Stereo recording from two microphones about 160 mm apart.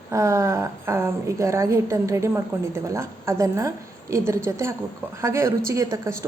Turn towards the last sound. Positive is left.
turn(degrees=-20)  # may be behind; listen again after turning